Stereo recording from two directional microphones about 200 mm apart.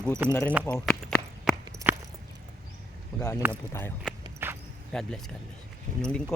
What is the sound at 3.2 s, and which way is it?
Speech, 15° left (ahead or behind).